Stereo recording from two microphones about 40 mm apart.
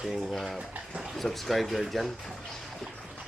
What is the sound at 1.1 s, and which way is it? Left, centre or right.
Speech, centre.